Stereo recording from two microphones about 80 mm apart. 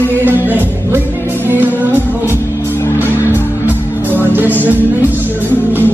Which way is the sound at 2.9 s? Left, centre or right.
Right.